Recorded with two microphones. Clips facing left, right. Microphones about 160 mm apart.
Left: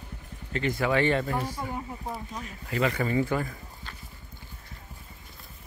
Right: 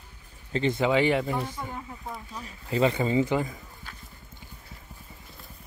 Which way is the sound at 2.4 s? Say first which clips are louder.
Right 4 dB; 30° right (ahead or behind).